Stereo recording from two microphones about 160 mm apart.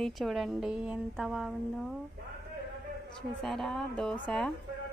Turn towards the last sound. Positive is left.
turn(degrees=0)  # may be behind; listen again after turning